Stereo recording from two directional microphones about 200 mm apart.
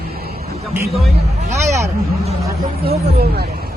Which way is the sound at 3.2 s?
55° right (ahead or behind).